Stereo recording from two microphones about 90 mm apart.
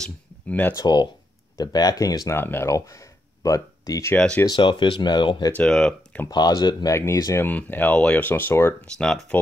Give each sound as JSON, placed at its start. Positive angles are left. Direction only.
{"t": 0.0, "sound": "speech", "side_deg": 15}
{"t": 0.7, "sound": "speech", "side_deg": 50}
{"t": 2.3, "sound": "speech", "side_deg": 25}
{"t": 2.7, "sound": "a sound", "side_deg": 35}
{"t": 4.1, "sound": "speech", "side_deg": 10}
{"t": 4.5, "sound": "speech", "side_deg": 65}
{"t": 5.5, "sound": "speech", "side_deg": 10}
{"t": 6.3, "sound": "speech", "side_deg": 50}
{"t": 6.9, "sound": "speech", "side_deg": 30}
{"t": 7.3, "sound": "speech", "side_deg": 20}
{"t": 8.9, "sound": "speech", "side_deg": 10}